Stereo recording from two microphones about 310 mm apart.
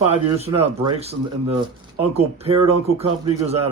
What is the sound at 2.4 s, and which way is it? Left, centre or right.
Speech, centre.